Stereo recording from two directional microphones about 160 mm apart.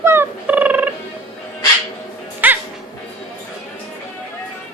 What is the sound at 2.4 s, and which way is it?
Music, 10° right (ahead or behind).